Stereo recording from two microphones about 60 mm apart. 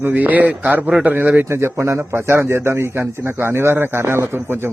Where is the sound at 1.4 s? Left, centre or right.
Right.